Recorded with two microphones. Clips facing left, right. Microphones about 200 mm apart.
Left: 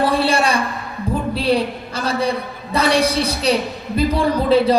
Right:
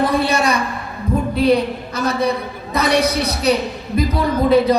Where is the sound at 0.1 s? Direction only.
30° left (ahead or behind).